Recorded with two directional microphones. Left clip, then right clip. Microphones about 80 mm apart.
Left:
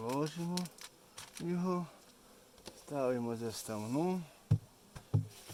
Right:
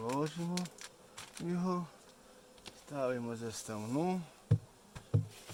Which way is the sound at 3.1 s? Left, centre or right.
Left.